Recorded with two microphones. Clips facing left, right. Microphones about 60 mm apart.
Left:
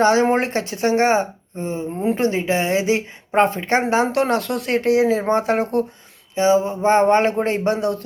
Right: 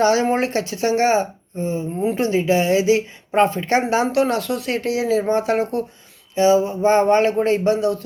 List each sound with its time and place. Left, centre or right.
0.0 s speech: left
6.3 s speech: left